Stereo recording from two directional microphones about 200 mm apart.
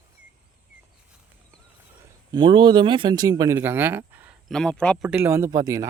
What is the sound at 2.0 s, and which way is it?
A man's voice, 20° right (ahead or behind).